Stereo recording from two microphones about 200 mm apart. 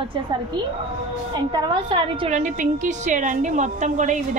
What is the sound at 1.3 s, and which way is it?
A woman's voice, 20° right (ahead or behind).